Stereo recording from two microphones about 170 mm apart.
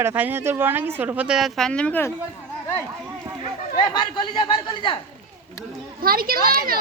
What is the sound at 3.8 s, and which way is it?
Speech, 30° left (ahead or behind).